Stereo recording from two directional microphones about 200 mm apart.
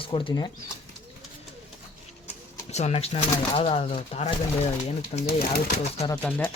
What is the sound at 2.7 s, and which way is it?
Speech, 35° left (ahead or behind).